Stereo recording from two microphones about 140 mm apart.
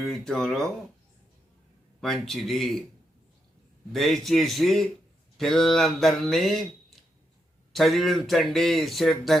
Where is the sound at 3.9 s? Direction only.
Centre (ahead or behind).